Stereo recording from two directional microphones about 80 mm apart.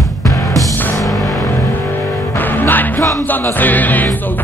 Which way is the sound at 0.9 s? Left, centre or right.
Centre.